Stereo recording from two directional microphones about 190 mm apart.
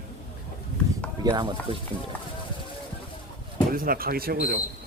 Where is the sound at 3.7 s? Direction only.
50° right (ahead or behind).